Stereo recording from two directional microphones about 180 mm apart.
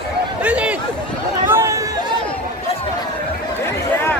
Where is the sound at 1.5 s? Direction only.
15° right (ahead or behind).